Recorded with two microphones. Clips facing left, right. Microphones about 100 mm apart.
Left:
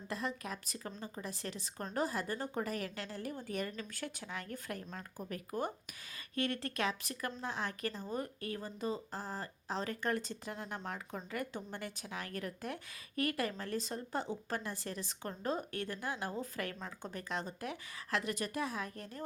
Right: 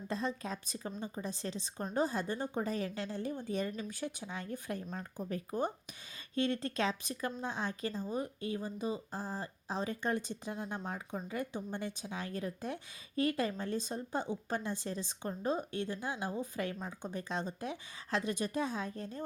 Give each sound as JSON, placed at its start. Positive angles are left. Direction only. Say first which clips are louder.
{"t": 0.1, "sound": "speech", "louder": "right 3 dB", "side_deg": -25}